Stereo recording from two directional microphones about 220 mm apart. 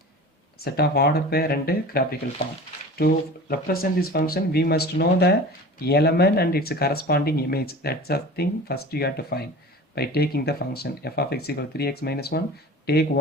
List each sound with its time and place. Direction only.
0.6 s speech: 45° left (ahead or behind)